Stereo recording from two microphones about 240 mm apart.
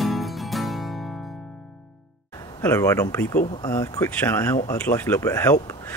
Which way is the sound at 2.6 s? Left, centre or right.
Centre.